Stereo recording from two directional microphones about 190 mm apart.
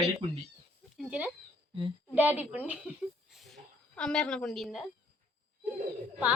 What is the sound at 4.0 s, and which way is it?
Speech, 5° left (ahead or behind).